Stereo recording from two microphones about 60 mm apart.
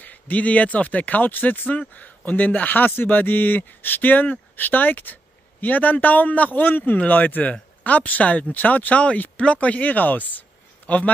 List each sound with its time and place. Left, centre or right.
0.0 s speech: left